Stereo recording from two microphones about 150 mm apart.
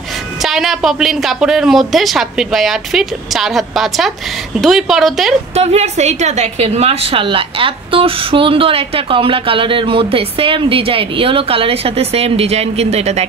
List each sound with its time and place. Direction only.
0.4 s speech: centre (ahead or behind)
5.5 s a woman's voice: 45° right (ahead or behind)